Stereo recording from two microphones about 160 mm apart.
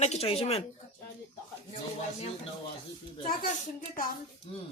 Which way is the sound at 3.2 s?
60° left (ahead or behind).